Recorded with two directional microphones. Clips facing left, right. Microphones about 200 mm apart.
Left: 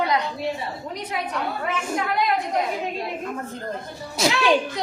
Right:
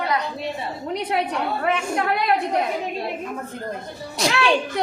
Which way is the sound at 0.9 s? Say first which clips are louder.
Right 7 dB; 65° right (ahead or behind).